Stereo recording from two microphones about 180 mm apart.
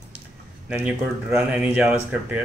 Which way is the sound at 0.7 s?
10° right (ahead or behind).